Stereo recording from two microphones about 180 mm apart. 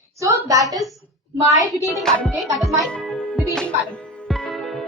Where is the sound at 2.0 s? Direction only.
5° left (ahead or behind).